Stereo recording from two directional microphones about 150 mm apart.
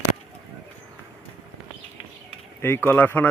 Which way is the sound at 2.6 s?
15° left (ahead or behind).